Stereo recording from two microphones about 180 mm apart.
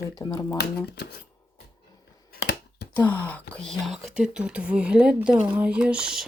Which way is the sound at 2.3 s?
65° left (ahead or behind).